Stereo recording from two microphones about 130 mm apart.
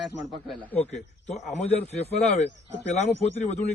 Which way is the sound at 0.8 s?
60° left (ahead or behind).